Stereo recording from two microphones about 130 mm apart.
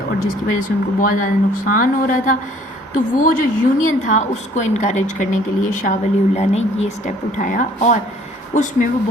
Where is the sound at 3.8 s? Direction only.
75° left (ahead or behind).